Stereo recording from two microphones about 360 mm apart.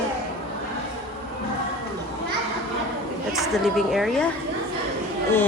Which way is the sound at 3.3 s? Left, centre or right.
Centre.